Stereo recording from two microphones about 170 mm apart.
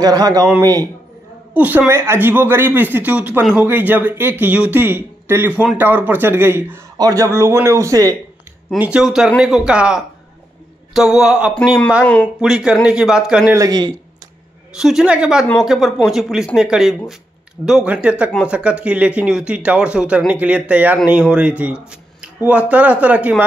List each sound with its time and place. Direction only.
0.0 s a man's voice: 20° right (ahead or behind)
1.5 s speech: 10° right (ahead or behind)
8.6 s speech: 5° right (ahead or behind)
12.0 s speech: 5° left (ahead or behind)
12.4 s speech: 5° right (ahead or behind)
13.6 s a man's voice: 25° right (ahead or behind)
14.8 s speech: 5° right (ahead or behind)